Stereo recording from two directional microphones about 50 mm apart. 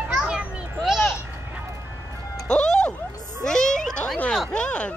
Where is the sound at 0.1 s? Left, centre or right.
Centre.